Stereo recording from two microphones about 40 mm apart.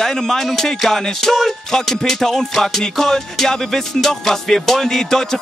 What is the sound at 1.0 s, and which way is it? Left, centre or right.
Music, centre.